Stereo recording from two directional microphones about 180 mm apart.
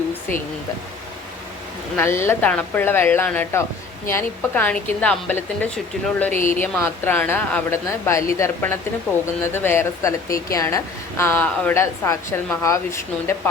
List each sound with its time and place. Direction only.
2.0 s speech: 15° left (ahead or behind)
6.3 s speech: 45° left (ahead or behind)
6.6 s speech: 15° left (ahead or behind)